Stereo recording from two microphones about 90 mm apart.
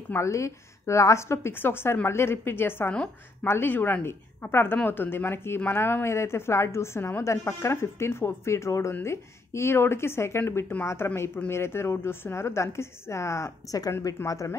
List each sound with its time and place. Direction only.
0.1 s a woman's voice: 35° left (ahead or behind)